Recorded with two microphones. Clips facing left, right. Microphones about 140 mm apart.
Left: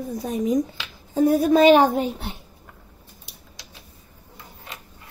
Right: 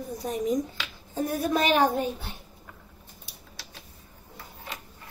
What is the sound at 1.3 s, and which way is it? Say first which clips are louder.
Speech: left 9 dB; 90° left.